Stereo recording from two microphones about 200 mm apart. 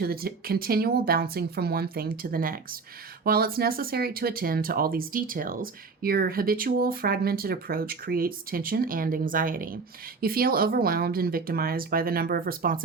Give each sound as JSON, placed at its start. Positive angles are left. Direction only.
{"t": 0.0, "sound": "speech", "side_deg": -50}